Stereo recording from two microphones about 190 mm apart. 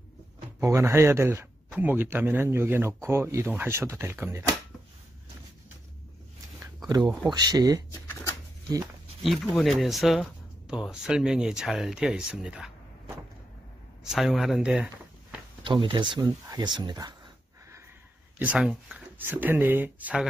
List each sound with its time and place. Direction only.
0.6 s speech: 15° right (ahead or behind)
7.0 s speech: 5° right (ahead or behind)
7.3 s speech: 20° right (ahead or behind)
7.9 s a sound: 15° left (ahead or behind)
9.2 s speech: centre (ahead or behind)
15.6 s speech: 25° right (ahead or behind)
18.4 s speech: 5° right (ahead or behind)